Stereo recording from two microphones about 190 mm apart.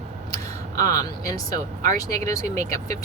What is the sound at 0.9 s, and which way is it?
A woman's voice, 15° left (ahead or behind).